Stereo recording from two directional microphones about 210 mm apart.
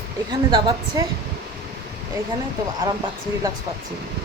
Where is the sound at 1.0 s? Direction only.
15° right (ahead or behind).